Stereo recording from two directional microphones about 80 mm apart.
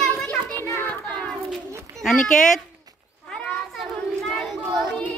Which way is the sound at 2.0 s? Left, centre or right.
Centre.